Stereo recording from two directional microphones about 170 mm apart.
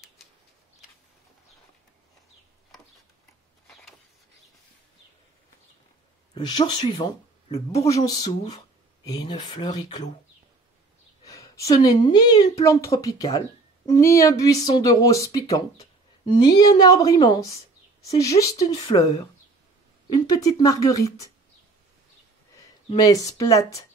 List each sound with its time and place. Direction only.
3.6 s a sound: centre (ahead or behind)
6.3 s speech: 25° left (ahead or behind)
7.9 s a woman's voice: 20° left (ahead or behind)
11.2 s a woman's voice: 20° left (ahead or behind)
20.2 s a woman's voice: 25° left (ahead or behind)
22.9 s a woman's voice: 20° left (ahead or behind)